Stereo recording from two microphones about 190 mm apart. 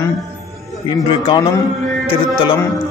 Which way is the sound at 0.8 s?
25° left (ahead or behind).